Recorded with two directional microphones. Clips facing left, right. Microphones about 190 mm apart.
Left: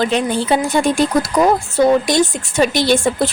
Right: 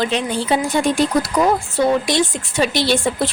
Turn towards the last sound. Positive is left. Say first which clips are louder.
# left 3 dB
turn(degrees=45)  # may be behind; listen again after turning